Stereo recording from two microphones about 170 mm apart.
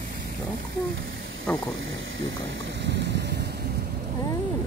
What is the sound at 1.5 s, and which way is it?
Speech, 5° left (ahead or behind).